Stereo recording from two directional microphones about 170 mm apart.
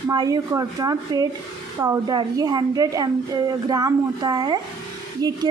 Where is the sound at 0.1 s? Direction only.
25° right (ahead or behind).